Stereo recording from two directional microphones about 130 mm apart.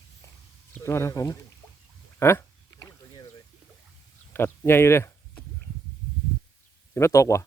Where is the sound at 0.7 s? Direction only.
20° left (ahead or behind).